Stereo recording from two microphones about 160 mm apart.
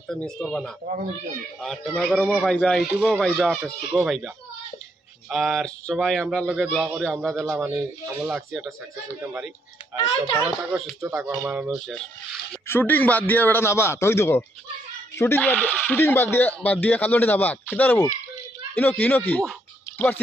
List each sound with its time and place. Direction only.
0.1 s speech: 5° left (ahead or behind)
5.3 s speech: centre (ahead or behind)
9.9 s a child's voice: 35° left (ahead or behind)
10.6 s speech: 5° right (ahead or behind)
12.6 s a man's voice: 10° left (ahead or behind)